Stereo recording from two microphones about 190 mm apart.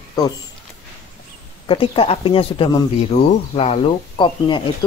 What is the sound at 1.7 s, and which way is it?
Speech, 30° left (ahead or behind).